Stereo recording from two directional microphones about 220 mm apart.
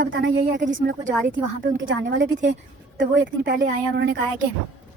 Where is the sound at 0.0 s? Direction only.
50° right (ahead or behind).